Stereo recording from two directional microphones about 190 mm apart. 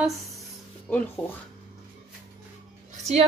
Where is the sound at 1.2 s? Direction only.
5° left (ahead or behind).